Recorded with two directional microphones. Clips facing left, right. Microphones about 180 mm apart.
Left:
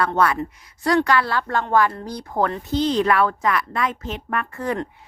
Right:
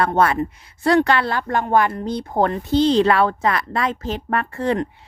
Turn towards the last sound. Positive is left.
turn(degrees=-25)  # may be behind; listen again after turning